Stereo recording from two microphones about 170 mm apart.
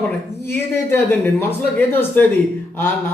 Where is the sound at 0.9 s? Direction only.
15° left (ahead or behind).